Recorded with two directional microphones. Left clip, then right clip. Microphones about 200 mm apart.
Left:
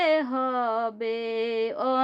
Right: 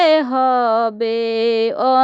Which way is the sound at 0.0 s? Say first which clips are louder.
Right 10 dB; 45° right (ahead or behind).